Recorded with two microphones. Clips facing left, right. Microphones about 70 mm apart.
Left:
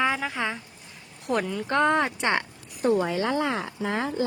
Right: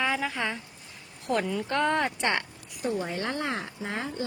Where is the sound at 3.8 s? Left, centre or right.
Left.